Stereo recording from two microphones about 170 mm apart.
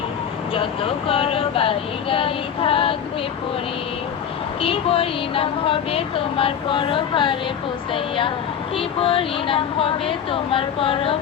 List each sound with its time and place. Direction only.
0.5 s a woman's voice: 30° left (ahead or behind)
4.6 s a woman's voice: 35° left (ahead or behind)